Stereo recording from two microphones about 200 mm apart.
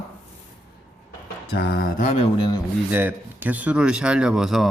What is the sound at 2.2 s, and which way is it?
Speech, 25° left (ahead or behind).